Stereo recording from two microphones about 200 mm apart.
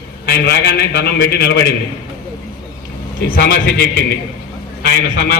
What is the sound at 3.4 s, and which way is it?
Speech, 50° left (ahead or behind).